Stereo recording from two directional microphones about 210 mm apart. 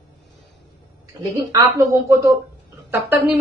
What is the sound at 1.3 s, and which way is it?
A woman's voice, 15° right (ahead or behind).